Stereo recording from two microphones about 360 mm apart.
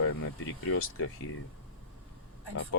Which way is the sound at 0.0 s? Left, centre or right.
Left.